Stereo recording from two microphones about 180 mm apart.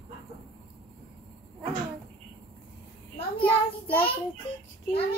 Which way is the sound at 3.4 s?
10° left (ahead or behind).